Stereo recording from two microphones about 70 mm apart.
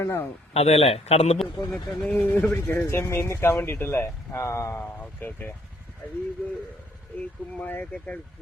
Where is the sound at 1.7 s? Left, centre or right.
Centre.